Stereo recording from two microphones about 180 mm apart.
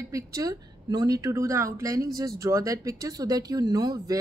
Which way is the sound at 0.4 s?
20° right (ahead or behind).